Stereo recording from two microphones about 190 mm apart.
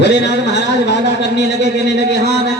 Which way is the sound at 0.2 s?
65° left (ahead or behind).